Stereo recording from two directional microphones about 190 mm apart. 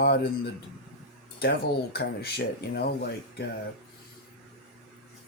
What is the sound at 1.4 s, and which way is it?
Speech, 55° left (ahead or behind).